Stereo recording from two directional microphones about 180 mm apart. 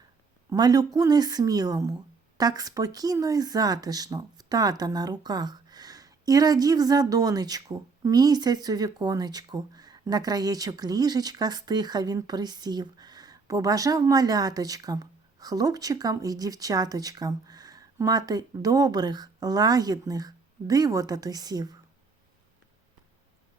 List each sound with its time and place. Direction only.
0.5 s speech: 20° right (ahead or behind)